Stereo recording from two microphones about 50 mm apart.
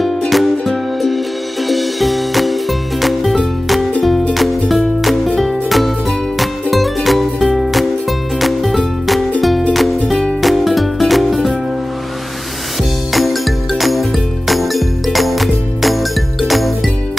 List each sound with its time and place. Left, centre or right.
0.3 s music: centre
13.1 s music: centre